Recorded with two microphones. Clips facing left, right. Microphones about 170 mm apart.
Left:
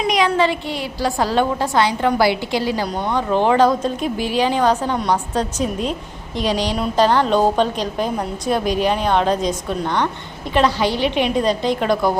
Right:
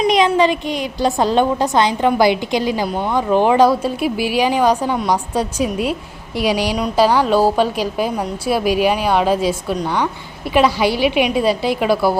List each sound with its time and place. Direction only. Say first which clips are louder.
0.1 s a woman's voice: right 1 dB; 20° right (ahead or behind)